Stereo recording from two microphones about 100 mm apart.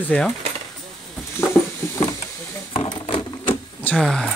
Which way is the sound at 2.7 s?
65° left (ahead or behind).